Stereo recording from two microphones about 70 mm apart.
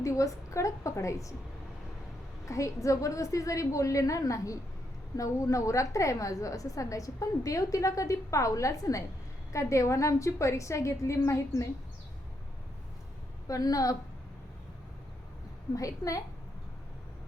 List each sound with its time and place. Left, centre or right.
0.0 s a woman's voice: left
2.5 s a woman's voice: left
13.5 s a woman's voice: left
15.7 s a woman's voice: left